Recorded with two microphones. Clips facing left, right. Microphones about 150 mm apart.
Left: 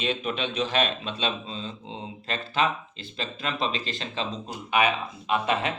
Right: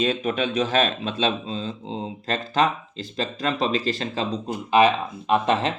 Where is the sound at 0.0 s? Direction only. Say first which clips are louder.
Right 5 dB; 40° right (ahead or behind).